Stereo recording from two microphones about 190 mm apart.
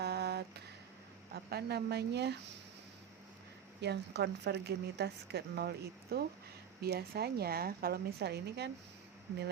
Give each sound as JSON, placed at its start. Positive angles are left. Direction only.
{"t": 0.0, "sound": "a sound", "side_deg": -60}
{"t": 1.3, "sound": "a woman's voice", "side_deg": -55}
{"t": 3.8, "sound": "a woman's voice", "side_deg": -60}